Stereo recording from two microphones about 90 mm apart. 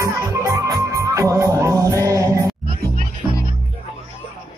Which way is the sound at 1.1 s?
35° right (ahead or behind).